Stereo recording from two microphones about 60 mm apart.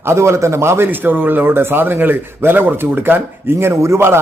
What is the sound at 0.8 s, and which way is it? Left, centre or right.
A man's voice, right.